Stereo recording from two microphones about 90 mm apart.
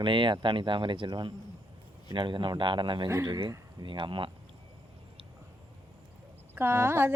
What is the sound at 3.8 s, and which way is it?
Speech, 65° right (ahead or behind).